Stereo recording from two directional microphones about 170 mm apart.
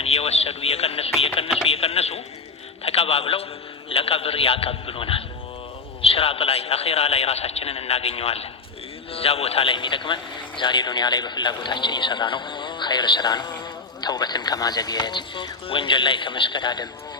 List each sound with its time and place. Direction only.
0.0 s a man's voice: 35° left (ahead or behind)